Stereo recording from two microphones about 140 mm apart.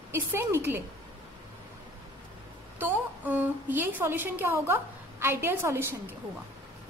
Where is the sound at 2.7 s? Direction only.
10° right (ahead or behind).